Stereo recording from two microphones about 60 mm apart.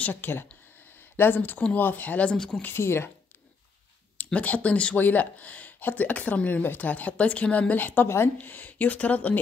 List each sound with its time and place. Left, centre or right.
0.1 s speech: left
2.3 s speech: centre
2.7 s speech: left
4.2 s speech: left